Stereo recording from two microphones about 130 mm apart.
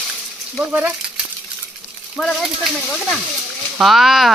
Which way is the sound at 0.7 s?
10° right (ahead or behind).